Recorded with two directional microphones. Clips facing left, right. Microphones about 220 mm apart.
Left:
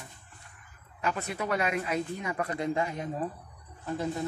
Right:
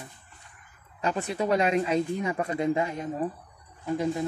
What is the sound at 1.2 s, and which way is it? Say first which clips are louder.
Speech: right 7 dB; 25° right (ahead or behind).